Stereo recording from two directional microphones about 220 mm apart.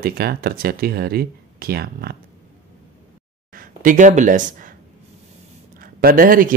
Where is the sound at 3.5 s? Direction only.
40° right (ahead or behind).